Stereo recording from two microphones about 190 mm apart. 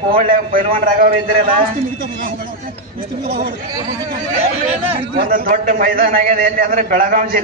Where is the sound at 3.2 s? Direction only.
60° right (ahead or behind).